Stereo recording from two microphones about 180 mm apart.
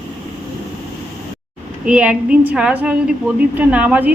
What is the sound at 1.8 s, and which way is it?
A woman's voice, 5° right (ahead or behind).